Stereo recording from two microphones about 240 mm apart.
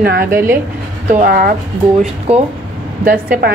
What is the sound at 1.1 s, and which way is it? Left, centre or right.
Speech, right.